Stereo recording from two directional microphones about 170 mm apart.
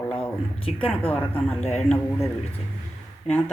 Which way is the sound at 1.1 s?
10° left (ahead or behind).